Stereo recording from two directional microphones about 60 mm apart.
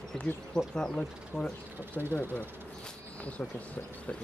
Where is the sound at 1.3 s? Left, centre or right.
Centre.